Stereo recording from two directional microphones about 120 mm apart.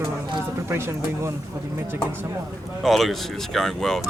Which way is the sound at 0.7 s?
20° right (ahead or behind).